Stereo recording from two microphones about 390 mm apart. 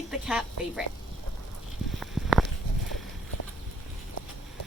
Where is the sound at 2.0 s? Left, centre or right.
Centre.